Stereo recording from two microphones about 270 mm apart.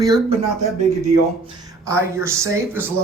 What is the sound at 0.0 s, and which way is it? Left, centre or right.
Speech, centre.